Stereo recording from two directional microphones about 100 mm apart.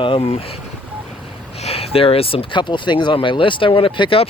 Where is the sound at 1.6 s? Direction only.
80° left; by 4.3 s 60° left (ahead or behind).